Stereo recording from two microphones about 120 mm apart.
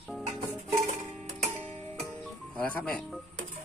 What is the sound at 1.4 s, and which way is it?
Music, 60° right (ahead or behind).